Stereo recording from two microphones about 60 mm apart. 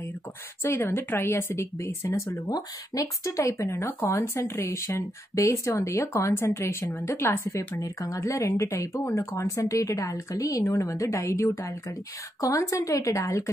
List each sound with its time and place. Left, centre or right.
0.6 s speech: left
2.2 s speech: left